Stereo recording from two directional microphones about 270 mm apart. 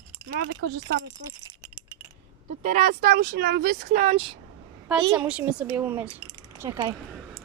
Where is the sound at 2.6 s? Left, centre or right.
Right.